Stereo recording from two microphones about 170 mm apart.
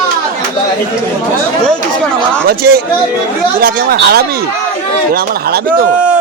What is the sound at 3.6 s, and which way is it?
Speech, 60° right (ahead or behind).